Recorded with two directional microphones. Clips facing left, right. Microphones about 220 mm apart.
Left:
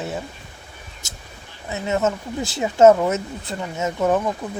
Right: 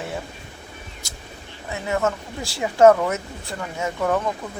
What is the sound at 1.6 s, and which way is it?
Speech, 20° left (ahead or behind).